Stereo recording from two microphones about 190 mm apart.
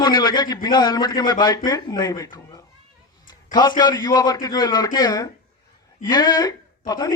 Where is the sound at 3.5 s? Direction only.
20° left (ahead or behind).